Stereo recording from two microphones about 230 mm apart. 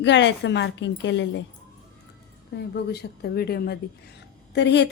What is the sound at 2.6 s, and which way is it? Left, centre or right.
A woman's voice, left.